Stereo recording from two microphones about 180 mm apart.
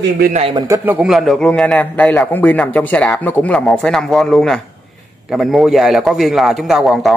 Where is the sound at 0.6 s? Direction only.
20° right (ahead or behind).